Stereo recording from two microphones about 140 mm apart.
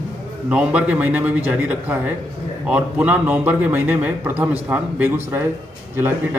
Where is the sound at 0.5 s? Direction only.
10° right (ahead or behind).